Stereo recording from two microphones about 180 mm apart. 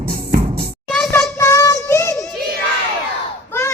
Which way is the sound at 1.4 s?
15° left (ahead or behind).